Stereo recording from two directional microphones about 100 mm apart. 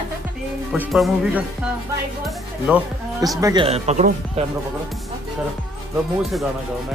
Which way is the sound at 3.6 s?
90° right.